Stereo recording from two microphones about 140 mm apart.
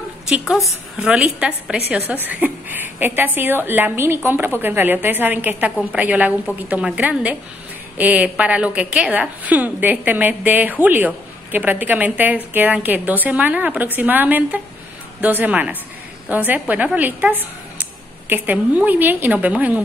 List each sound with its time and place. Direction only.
0.3 s a woman's voice: 5° right (ahead or behind)